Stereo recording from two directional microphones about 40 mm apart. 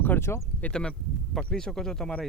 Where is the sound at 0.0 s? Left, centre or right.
Left.